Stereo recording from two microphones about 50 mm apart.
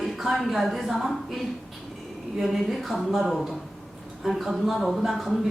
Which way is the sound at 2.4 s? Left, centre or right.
Centre.